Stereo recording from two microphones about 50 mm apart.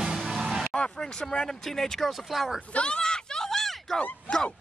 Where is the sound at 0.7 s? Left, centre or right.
Centre.